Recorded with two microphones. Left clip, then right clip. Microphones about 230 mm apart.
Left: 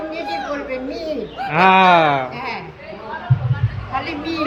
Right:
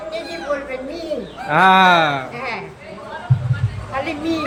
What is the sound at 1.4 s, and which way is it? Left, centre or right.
Speech, centre.